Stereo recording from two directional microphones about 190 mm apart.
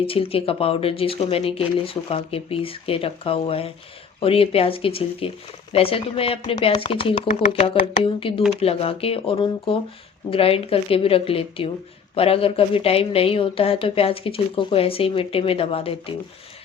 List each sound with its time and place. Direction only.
0.0 s speech: 30° left (ahead or behind)